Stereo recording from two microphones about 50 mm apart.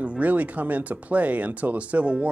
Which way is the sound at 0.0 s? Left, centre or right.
Right.